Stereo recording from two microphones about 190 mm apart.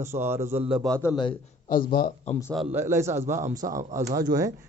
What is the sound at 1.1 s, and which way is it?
Speech, 25° left (ahead or behind).